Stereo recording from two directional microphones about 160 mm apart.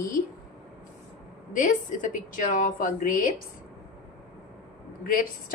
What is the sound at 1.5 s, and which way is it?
A woman's voice, 55° left (ahead or behind).